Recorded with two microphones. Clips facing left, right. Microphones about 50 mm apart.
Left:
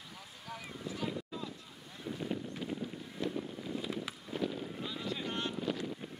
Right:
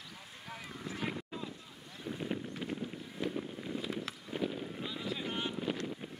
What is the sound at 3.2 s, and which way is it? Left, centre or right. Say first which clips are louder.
Wind noise: even; centre.